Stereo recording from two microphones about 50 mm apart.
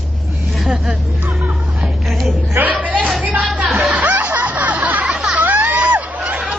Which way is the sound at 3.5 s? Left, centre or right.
Right.